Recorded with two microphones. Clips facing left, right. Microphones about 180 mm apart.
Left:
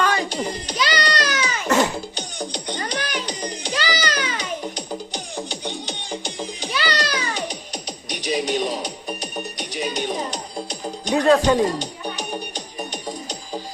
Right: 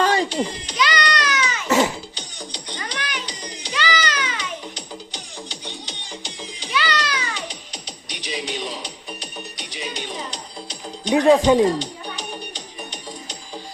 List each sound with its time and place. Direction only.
0.0 s a sound: 30° right (ahead or behind)
0.4 s baby cry: 40° left (ahead or behind)
1.6 s music: 5° right (ahead or behind)
2.1 s music: 50° left (ahead or behind)
11.1 s speech: 15° right (ahead or behind)
11.8 s music: 45° left (ahead or behind)